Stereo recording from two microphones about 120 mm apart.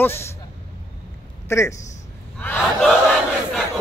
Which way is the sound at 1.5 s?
25° left (ahead or behind).